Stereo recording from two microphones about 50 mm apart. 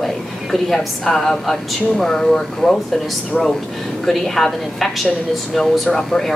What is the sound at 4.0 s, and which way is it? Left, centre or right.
A woman's voice, centre.